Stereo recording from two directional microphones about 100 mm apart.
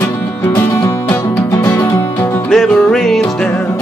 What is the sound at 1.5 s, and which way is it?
Music, 25° left (ahead or behind).